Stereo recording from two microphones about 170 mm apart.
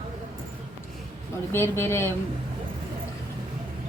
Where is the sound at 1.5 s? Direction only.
15° left (ahead or behind).